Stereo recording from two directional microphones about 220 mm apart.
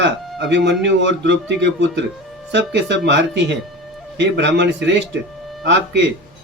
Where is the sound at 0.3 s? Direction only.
50° right (ahead or behind).